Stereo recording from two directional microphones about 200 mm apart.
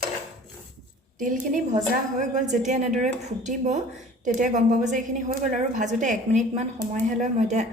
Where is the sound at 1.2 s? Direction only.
40° right (ahead or behind).